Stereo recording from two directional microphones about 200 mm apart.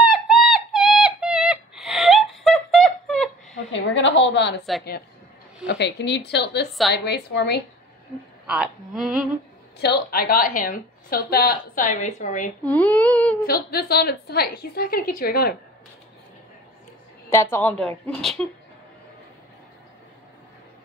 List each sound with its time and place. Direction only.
0.0 s a sound: centre (ahead or behind)
3.7 s a woman's voice: 65° left (ahead or behind)
5.7 s a woman's voice: 60° left (ahead or behind)
8.5 s a woman's voice: 5° right (ahead or behind)
9.8 s a woman's voice: 50° left (ahead or behind)
12.6 s a woman's voice: 5° left (ahead or behind)
13.5 s a woman's voice: 50° left (ahead or behind)
17.3 s a woman's voice: 15° left (ahead or behind)